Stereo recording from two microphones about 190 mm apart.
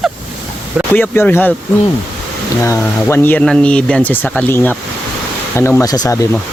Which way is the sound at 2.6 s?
10° left (ahead or behind).